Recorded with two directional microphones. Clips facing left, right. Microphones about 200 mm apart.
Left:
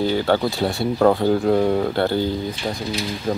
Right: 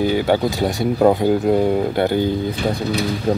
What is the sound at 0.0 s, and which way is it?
Speech, 15° right (ahead or behind).